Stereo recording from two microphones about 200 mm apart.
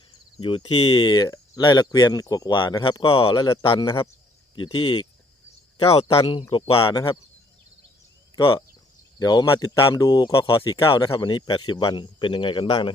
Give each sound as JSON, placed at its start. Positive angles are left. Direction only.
{"t": 0.3, "sound": "speech", "side_deg": 25}
{"t": 9.1, "sound": "speech", "side_deg": 20}